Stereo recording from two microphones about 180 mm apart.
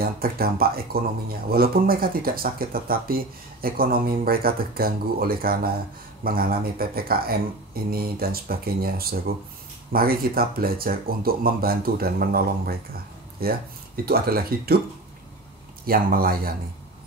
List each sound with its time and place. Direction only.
0.0 s speech: 55° right (ahead or behind)
15.8 s speech: 55° right (ahead or behind)